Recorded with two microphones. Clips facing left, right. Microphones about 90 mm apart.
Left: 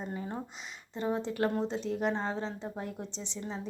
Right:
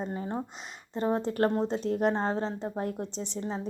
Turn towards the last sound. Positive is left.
turn(degrees=-35)  # may be behind; listen again after turning